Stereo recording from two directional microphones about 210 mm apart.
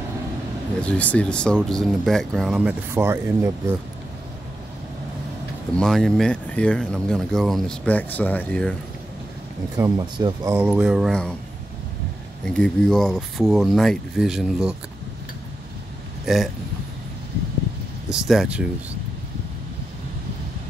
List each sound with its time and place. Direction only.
0.7 s speech: 5° left (ahead or behind); by 3.5 s 10° right (ahead or behind)
5.8 s speech: 5° left (ahead or behind)
9.8 s speech: 15° right (ahead or behind)
10.5 s speech: 10° right (ahead or behind)
12.4 s speech: 5° left (ahead or behind)
16.3 s speech: centre (ahead or behind)
18.1 s speech: centre (ahead or behind)